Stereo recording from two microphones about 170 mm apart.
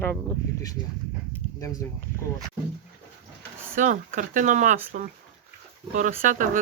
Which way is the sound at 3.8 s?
50° right (ahead or behind).